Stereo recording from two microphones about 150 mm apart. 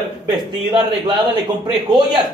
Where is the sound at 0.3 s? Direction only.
30° right (ahead or behind).